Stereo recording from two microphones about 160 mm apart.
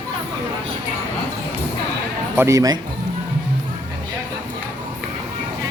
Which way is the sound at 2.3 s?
20° right (ahead or behind).